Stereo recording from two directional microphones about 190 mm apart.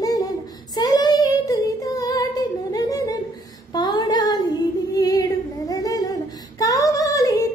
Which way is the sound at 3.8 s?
25° left (ahead or behind).